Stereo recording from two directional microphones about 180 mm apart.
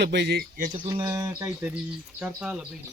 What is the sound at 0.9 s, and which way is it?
Speech, 20° right (ahead or behind).